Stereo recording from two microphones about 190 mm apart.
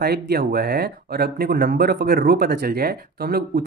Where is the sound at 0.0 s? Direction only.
55° right (ahead or behind).